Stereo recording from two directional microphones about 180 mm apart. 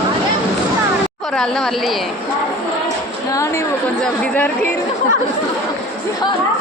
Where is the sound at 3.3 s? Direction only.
15° left (ahead or behind).